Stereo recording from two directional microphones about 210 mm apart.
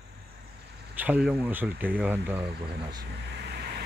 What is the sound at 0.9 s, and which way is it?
Speech, 5° right (ahead or behind).